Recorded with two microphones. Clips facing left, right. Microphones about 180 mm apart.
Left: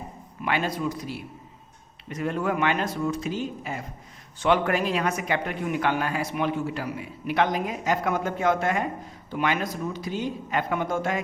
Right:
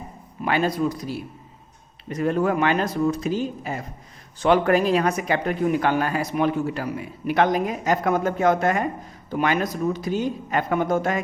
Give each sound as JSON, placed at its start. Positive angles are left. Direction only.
{"t": 0.4, "sound": "a man's voice", "side_deg": -40}